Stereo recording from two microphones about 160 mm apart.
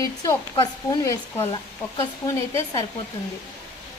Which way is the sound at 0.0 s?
20° left (ahead or behind).